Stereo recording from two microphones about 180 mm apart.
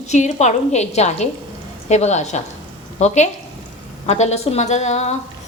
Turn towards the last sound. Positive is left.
turn(degrees=40)  # may be behind; listen again after turning